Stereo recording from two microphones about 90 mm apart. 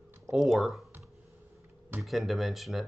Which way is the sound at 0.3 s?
5° right (ahead or behind).